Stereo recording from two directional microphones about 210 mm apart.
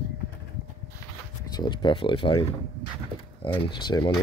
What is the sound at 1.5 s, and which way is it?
Speech, 20° left (ahead or behind).